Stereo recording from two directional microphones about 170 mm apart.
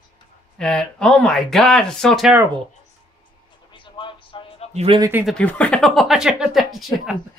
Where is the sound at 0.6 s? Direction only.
5° left (ahead or behind).